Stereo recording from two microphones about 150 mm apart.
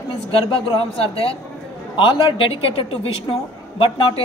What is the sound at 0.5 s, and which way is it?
A woman's voice, 40° left (ahead or behind).